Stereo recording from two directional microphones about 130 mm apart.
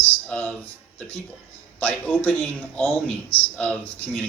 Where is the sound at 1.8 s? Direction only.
10° left (ahead or behind).